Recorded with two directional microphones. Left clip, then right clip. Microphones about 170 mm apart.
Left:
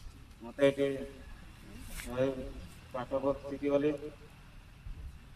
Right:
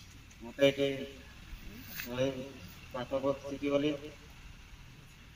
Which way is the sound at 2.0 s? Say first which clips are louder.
Right 2 dB; 40° left (ahead or behind).